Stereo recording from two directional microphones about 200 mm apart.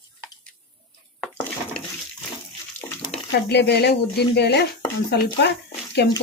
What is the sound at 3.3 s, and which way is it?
Speech, 55° left (ahead or behind).